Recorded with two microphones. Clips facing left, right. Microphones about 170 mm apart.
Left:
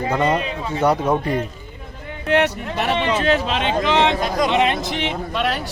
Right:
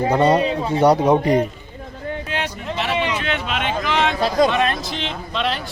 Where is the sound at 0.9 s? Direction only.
15° right (ahead or behind).